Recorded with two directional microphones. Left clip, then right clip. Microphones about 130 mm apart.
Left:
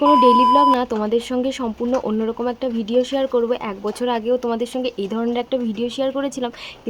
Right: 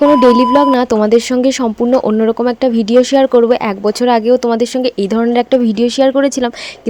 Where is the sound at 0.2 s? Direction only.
50° right (ahead or behind).